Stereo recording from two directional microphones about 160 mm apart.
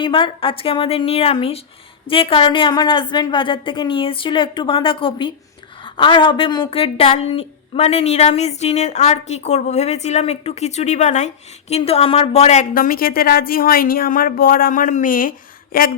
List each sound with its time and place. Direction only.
0.0 s a woman's voice: 35° left (ahead or behind)
12.7 s a woman's voice: 65° left (ahead or behind)